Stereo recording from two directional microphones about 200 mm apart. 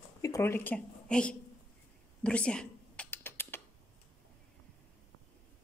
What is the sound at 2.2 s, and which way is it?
Typing, 5° left (ahead or behind).